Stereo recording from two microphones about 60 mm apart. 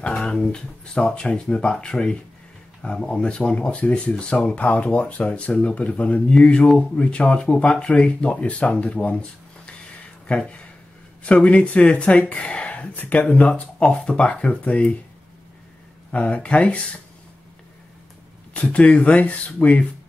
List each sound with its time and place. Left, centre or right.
0.0 s speech: centre
16.1 s speech: left
18.5 s speech: left